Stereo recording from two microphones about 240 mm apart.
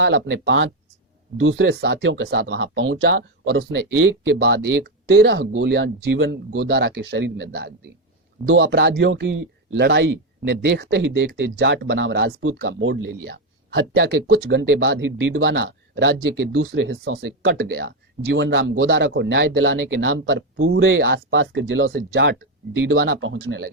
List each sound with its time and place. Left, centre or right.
0.0 s speech: right
8.4 s speech: right
8.7 s speech: right
21.9 s speech: right
23.0 s speech: right